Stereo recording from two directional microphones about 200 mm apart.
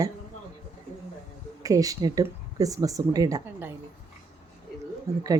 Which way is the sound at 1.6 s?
15° right (ahead or behind).